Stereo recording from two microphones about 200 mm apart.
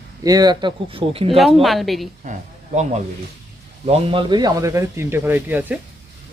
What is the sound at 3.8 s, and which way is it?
A man's voice, 25° right (ahead or behind).